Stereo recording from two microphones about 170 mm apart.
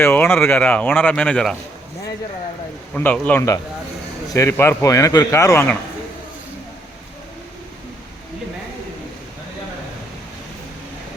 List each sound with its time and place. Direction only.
0.0 s speech: 10° left (ahead or behind)
2.9 s a man's voice: 10° left (ahead or behind)